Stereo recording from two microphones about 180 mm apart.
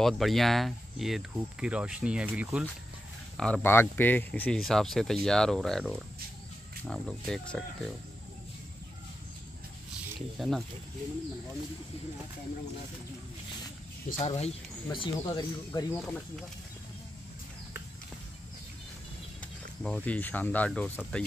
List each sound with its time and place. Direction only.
0.0 s speech: centre (ahead or behind)
3.3 s speech: 5° left (ahead or behind)
10.4 s speech: centre (ahead or behind)
14.1 s speech: 35° left (ahead or behind)
15.9 s speech: 5° left (ahead or behind)
19.8 s speech: 5° left (ahead or behind)